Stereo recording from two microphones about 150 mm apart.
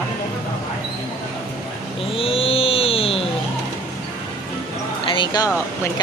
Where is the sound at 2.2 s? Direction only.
40° left (ahead or behind).